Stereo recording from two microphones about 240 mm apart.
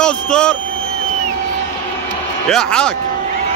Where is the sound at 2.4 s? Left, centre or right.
Centre.